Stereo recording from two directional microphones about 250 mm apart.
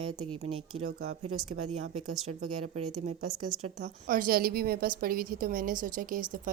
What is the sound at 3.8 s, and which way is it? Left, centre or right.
A woman's voice, right.